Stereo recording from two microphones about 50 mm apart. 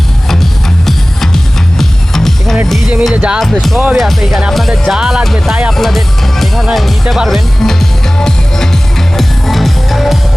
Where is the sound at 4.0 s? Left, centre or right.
Centre.